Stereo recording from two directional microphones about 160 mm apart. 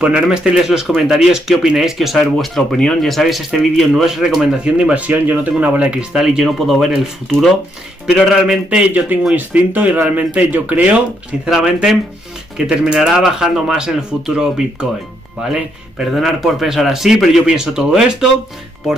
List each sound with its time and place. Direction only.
0.0 s speech: 5° right (ahead or behind)
8.1 s speech: 5° right (ahead or behind)